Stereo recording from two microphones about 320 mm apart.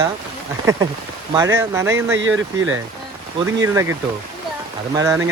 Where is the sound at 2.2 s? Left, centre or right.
Right.